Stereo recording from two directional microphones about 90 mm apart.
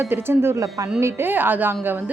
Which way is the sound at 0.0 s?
25° right (ahead or behind).